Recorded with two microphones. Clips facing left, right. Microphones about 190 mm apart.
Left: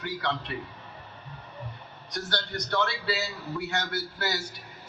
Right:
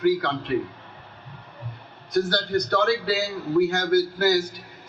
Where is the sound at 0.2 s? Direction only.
55° right (ahead or behind).